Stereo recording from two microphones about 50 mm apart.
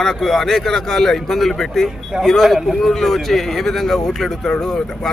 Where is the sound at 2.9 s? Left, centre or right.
Centre.